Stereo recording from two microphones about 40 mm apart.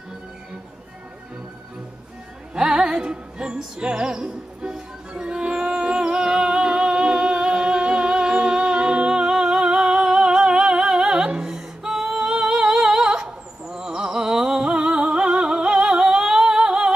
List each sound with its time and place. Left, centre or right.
2.5 s music: centre
11.5 s singing: centre